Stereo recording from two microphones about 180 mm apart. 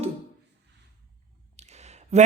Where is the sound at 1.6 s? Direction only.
40° right (ahead or behind).